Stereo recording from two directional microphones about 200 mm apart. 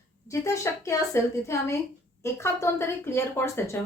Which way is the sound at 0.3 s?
15° left (ahead or behind).